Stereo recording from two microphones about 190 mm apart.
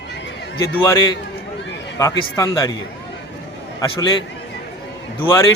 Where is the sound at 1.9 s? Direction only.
20° left (ahead or behind).